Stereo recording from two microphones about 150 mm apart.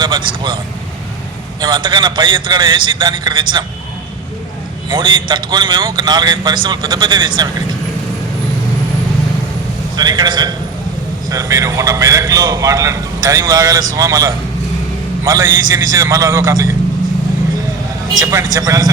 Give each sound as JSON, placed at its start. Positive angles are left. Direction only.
{"t": 0.0, "sound": "a man's voice", "side_deg": -30}
{"t": 1.6, "sound": "a man's voice", "side_deg": -30}
{"t": 4.9, "sound": "a man's voice", "side_deg": -30}
{"t": 9.9, "sound": "a man's voice", "side_deg": -25}
{"t": 18.2, "sound": "a man's voice", "side_deg": -20}